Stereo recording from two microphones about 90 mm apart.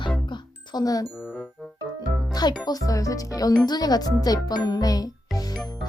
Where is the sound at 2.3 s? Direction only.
50° left (ahead or behind).